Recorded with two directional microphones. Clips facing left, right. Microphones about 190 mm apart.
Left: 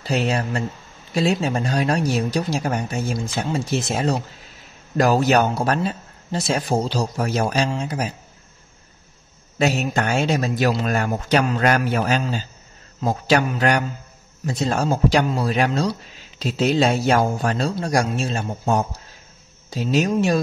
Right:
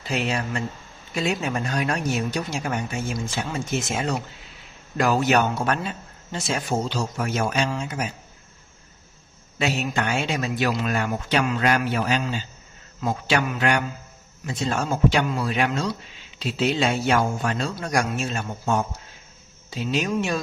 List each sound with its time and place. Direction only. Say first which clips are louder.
0.0 s a man's voice: left 4 dB; 35° left (ahead or behind)
9.6 s a man's voice: left 4 dB; 40° left (ahead or behind)